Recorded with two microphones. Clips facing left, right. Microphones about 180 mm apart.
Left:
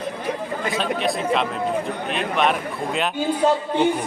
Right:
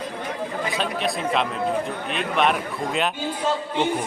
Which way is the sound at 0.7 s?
Centre (ahead or behind).